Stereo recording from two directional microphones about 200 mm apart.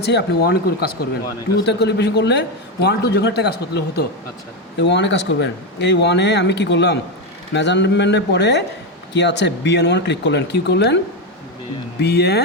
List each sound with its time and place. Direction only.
0.0 s speech: 55° left (ahead or behind)
12.0 s speech: 55° left (ahead or behind)